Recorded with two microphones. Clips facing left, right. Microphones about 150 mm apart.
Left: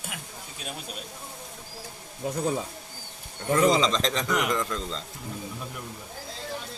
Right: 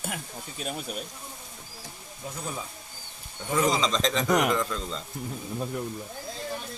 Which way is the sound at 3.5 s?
Centre (ahead or behind).